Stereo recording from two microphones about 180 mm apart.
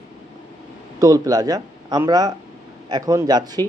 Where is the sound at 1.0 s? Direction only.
20° right (ahead or behind).